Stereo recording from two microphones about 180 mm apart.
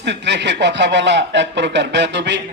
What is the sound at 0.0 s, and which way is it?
Speech, 75° right (ahead or behind).